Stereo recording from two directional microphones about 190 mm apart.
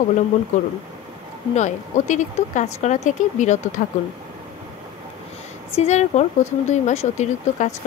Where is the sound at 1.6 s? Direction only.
40° left (ahead or behind).